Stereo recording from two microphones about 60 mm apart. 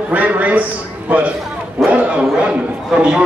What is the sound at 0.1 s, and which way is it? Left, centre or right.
A man's voice, right.